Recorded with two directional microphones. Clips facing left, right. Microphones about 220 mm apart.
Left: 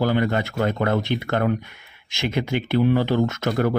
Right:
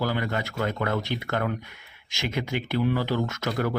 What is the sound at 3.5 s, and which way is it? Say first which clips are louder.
Speech: left 4 dB; 50° left (ahead or behind).